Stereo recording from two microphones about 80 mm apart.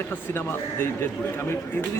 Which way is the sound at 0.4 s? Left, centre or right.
Left.